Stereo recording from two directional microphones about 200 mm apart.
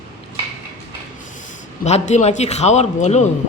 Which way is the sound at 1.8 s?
35° left (ahead or behind).